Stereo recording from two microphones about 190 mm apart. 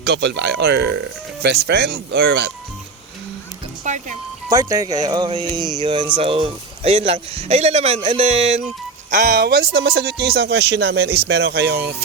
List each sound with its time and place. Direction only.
0.0 s speech: 65° right (ahead or behind)
3.9 s music: 40° right (ahead or behind)
4.4 s a man's voice: 15° right (ahead or behind); by 8.4 s 35° right (ahead or behind)
9.0 s speech: 45° right (ahead or behind)